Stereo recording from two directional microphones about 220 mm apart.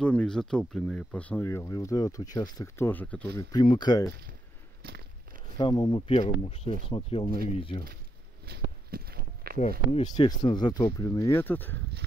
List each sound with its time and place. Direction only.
0.0 s speech: 5° left (ahead or behind)
3.3 s speech: 20° left (ahead or behind)
5.6 s speech: 20° left (ahead or behind)
8.5 s a sound: 45° right (ahead or behind)
10.1 s speech: 20° left (ahead or behind)